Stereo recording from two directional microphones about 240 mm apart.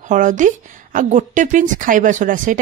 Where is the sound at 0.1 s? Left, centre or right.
Right.